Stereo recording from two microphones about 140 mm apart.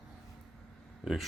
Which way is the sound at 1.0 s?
5° right (ahead or behind).